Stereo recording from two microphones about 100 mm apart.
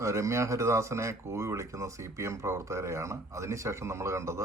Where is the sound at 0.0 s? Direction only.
30° right (ahead or behind).